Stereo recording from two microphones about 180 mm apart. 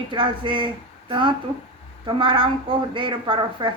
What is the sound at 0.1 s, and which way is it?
Speech, 25° right (ahead or behind).